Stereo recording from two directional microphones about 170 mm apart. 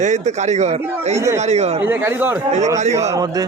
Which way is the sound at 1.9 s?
15° right (ahead or behind).